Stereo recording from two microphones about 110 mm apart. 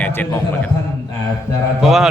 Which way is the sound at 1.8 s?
Centre (ahead or behind).